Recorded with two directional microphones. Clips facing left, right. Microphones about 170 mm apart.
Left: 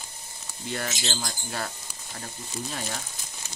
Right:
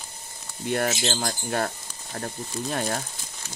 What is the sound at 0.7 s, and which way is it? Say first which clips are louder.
Speech: right 7 dB; 50° right (ahead or behind).